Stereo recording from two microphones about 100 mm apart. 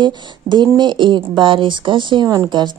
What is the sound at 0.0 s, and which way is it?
A woman's voice, 50° right (ahead or behind).